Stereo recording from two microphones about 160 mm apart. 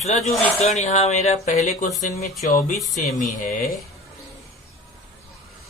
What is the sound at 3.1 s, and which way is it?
Speech, 55° left (ahead or behind).